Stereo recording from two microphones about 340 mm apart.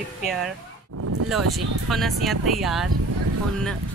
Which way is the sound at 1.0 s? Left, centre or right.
Right.